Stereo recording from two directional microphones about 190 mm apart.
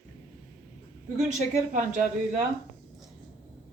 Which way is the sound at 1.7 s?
40° right (ahead or behind).